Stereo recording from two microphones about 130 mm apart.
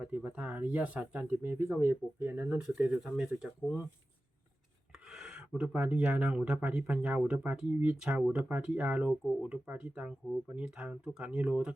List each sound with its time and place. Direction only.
0.0 s speech: 10° right (ahead or behind)
5.1 s speech: 5° right (ahead or behind)